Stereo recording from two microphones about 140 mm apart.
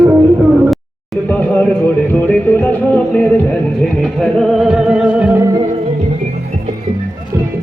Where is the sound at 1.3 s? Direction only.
10° left (ahead or behind); by 5.4 s 10° right (ahead or behind).